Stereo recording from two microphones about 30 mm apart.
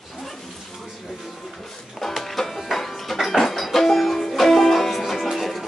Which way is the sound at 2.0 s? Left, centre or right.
Centre.